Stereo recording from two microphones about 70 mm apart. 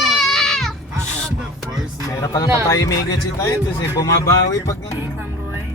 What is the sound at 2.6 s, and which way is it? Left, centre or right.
Music, left.